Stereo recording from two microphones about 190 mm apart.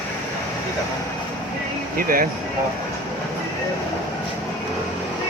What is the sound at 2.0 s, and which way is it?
Speech, 50° right (ahead or behind).